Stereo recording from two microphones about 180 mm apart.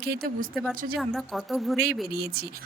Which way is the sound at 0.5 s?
Centre (ahead or behind).